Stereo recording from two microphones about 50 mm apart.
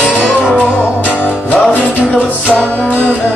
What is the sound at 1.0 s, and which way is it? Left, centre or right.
Music, left.